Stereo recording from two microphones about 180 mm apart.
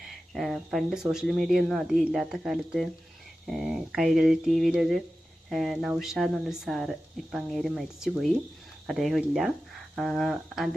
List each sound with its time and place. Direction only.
0.3 s speech: centre (ahead or behind)